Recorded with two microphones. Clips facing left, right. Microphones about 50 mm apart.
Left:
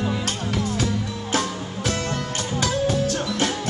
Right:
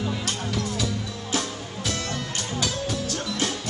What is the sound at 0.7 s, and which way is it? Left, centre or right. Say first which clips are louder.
Music: left 4 dB; left.